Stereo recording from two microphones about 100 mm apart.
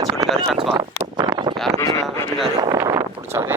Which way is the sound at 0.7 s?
45° right (ahead or behind).